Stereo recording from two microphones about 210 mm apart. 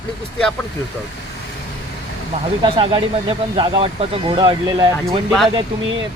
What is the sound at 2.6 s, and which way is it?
Speech, 25° right (ahead or behind).